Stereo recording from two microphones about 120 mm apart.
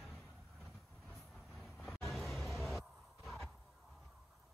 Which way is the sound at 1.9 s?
Centre (ahead or behind).